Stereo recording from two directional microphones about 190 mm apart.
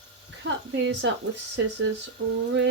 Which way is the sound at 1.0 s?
75° right (ahead or behind).